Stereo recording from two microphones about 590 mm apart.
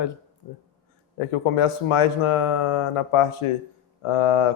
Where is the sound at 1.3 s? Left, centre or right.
Left.